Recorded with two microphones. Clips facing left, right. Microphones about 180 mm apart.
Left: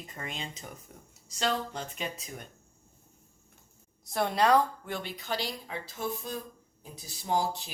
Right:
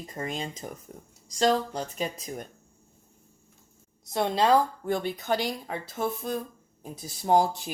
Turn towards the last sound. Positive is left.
turn(degrees=-50)  # may be behind; listen again after turning